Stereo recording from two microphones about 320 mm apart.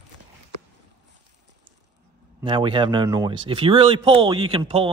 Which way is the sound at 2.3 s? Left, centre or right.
Centre.